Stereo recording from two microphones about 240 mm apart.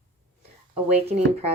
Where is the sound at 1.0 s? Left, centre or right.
Right.